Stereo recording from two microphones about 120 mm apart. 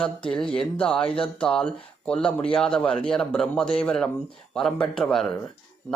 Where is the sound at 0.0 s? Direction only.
5° left (ahead or behind).